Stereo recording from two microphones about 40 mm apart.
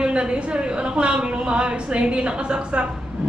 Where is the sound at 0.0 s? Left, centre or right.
Right.